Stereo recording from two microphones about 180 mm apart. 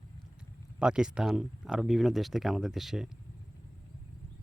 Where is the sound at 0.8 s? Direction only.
5° right (ahead or behind).